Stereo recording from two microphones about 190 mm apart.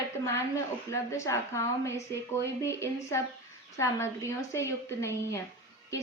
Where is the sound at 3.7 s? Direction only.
15° left (ahead or behind).